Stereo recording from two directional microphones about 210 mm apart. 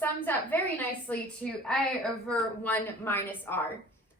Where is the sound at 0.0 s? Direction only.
10° left (ahead or behind).